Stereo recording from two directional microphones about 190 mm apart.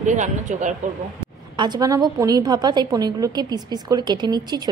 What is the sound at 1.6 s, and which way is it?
A woman's voice, 20° right (ahead or behind).